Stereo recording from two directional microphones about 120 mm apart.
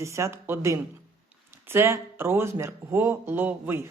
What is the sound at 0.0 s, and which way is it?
Speech, 25° right (ahead or behind).